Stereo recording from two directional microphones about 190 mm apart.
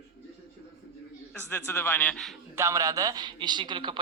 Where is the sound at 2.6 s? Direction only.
15° right (ahead or behind).